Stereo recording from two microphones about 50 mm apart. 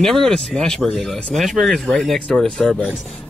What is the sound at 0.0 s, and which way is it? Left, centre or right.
Speech, centre.